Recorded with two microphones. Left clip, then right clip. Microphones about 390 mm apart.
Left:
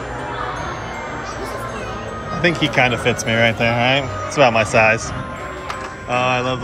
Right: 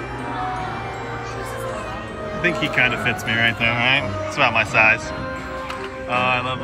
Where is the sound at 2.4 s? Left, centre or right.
Left.